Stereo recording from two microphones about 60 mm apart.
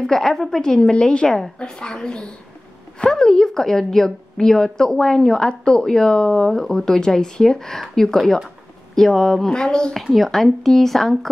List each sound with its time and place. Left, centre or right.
0.0 s a woman's voice: centre
10.0 s speech: centre